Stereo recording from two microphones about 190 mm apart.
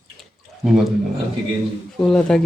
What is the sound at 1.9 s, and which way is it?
Speech, 5° left (ahead or behind).